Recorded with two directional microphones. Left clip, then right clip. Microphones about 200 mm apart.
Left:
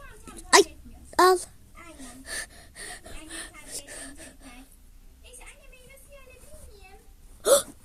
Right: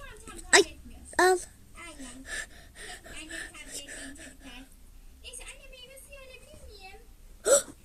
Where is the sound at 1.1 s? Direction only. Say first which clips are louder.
Left 4 dB; 20° left (ahead or behind).